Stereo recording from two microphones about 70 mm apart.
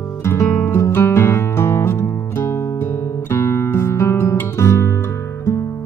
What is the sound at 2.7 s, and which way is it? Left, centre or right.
Guitar, left.